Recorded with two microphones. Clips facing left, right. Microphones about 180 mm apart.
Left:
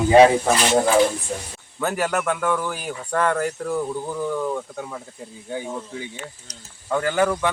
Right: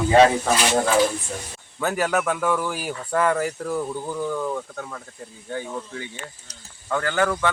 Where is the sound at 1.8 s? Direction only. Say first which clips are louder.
Even; centre (ahead or behind).